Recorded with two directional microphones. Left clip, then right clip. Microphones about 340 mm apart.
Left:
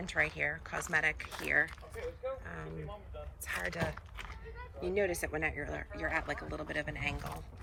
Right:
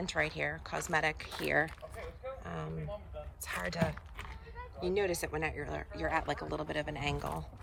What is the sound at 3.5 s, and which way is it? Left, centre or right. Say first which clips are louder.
Speech: right 1 dB; centre.